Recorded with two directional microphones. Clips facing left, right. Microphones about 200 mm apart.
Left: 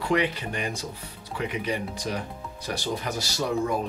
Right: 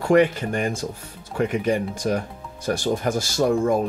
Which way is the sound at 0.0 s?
45° right (ahead or behind).